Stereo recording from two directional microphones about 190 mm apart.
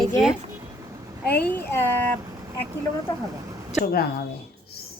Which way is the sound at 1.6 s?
10° left (ahead or behind).